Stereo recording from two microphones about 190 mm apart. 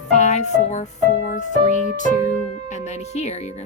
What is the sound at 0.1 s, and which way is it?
Music, 40° left (ahead or behind).